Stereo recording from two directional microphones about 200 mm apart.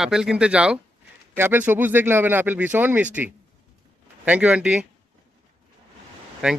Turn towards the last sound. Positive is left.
turn(degrees=-5)  # may be behind; listen again after turning